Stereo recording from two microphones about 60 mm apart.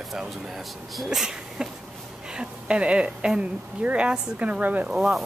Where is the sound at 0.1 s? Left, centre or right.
Centre; by 4.8 s right.